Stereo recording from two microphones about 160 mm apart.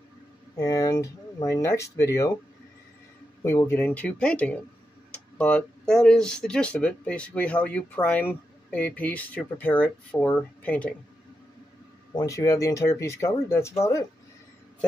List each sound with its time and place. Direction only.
0.6 s speech: 20° left (ahead or behind)
3.4 s speech: 15° left (ahead or behind)
12.2 s speech: 20° left (ahead or behind)